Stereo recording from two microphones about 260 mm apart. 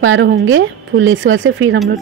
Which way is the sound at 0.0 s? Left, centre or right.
Right.